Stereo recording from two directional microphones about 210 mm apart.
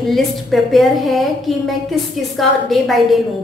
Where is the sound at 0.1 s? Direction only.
Centre (ahead or behind).